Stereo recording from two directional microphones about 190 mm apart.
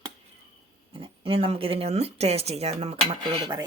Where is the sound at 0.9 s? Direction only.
30° right (ahead or behind).